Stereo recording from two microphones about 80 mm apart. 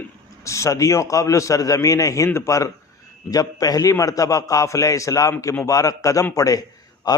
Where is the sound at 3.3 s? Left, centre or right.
Left.